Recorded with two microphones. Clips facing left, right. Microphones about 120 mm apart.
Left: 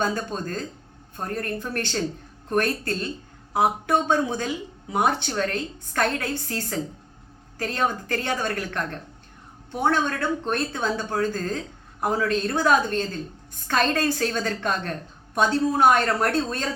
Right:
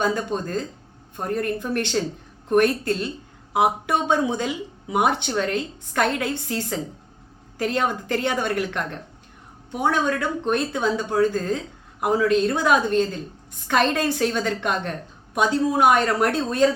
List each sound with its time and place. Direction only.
0.0 s speech: 15° right (ahead or behind)